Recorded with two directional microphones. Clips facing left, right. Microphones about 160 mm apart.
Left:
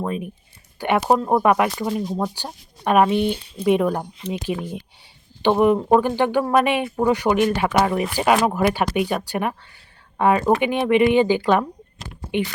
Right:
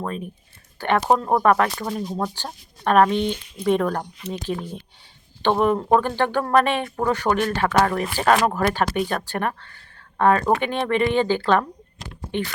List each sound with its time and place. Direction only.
0.0 s speech: 10° left (ahead or behind)
3.3 s speech: 30° left (ahead or behind)
3.6 s speech: 10° left (ahead or behind)